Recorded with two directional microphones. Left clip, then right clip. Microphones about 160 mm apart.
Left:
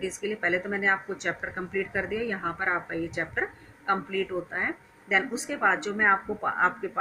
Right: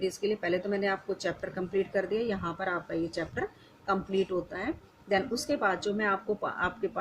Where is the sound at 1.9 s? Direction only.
45° right (ahead or behind).